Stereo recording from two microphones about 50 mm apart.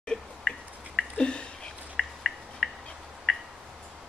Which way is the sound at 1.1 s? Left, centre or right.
Centre.